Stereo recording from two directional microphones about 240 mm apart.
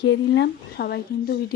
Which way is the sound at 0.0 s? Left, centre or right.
Left.